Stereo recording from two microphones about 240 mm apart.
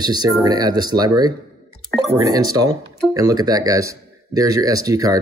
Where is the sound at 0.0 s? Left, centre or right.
Centre.